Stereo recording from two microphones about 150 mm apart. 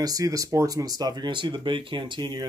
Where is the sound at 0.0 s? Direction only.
25° right (ahead or behind).